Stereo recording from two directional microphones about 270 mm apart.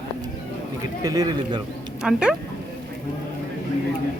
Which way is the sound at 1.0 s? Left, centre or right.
Centre.